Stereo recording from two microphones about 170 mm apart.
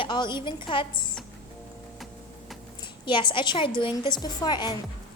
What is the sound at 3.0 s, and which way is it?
A woman's voice, 30° left (ahead or behind).